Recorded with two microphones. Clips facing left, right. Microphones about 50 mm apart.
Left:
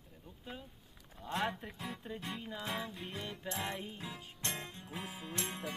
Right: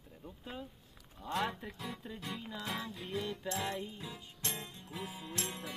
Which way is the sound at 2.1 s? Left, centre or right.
Centre.